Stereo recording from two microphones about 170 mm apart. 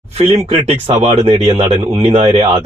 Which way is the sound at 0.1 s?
35° right (ahead or behind).